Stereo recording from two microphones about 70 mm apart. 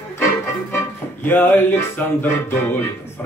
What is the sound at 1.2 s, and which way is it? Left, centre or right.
Music, left.